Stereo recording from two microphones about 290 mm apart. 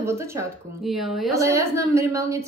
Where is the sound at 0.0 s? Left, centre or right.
Centre.